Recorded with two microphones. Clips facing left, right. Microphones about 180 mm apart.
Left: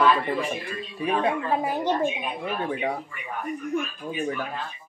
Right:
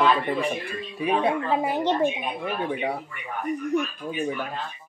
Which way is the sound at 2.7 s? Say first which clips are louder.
Even; 5° right (ahead or behind).